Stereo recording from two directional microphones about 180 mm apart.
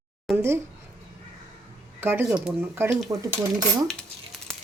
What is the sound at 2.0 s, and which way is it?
Speech, 10° right (ahead or behind).